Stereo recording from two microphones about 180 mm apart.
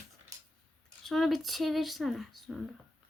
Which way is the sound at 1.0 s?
Centre (ahead or behind).